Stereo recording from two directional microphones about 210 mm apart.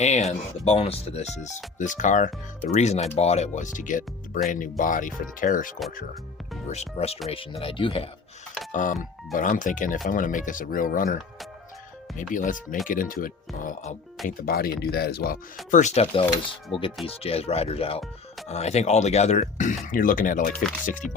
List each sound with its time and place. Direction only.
0.0 s speech: 30° left (ahead or behind)
8.7 s speech: 40° left (ahead or behind)
12.3 s speech: 40° left (ahead or behind)
15.7 s speech: 35° left (ahead or behind)
21.0 s music: centre (ahead or behind)